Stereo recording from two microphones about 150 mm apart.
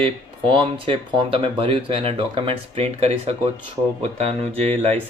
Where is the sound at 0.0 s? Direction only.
35° right (ahead or behind).